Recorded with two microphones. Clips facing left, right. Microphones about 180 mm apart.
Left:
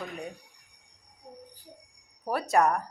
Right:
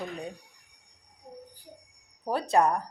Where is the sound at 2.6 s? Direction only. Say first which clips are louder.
Even; 15° right (ahead or behind).